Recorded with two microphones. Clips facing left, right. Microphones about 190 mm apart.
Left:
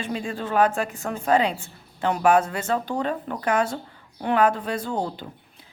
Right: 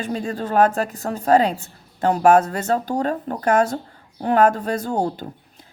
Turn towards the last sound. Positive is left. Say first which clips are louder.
# right 5 dB
turn(degrees=-45)  # may be behind; listen again after turning